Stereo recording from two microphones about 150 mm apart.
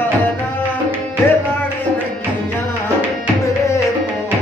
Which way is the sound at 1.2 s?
15° left (ahead or behind).